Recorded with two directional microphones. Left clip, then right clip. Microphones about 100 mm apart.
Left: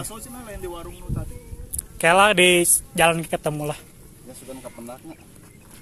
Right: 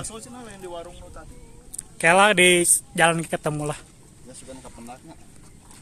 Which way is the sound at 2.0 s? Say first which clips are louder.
Left 1 dB; 25° right (ahead or behind).